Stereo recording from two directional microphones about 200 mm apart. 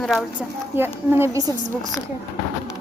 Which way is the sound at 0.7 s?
10° right (ahead or behind).